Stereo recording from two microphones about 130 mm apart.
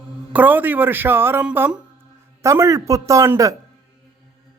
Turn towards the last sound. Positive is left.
turn(degrees=-25)  # may be behind; listen again after turning